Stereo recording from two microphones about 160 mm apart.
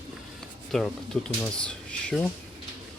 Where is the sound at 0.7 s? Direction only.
5° left (ahead or behind).